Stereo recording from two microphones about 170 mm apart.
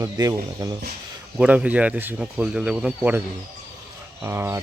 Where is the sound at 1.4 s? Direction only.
10° right (ahead or behind).